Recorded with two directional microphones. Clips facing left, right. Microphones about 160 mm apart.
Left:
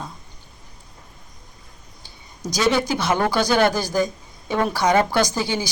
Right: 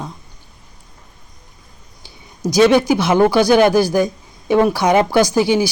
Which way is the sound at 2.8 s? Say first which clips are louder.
Right 8 dB; 10° right (ahead or behind).